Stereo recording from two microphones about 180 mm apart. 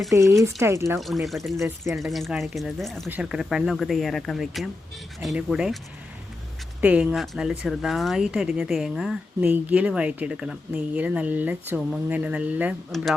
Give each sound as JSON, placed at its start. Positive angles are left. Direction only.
{"t": 0.1, "sound": "speech", "side_deg": -20}
{"t": 0.9, "sound": "speech", "side_deg": 0}
{"t": 6.8, "sound": "speech", "side_deg": -5}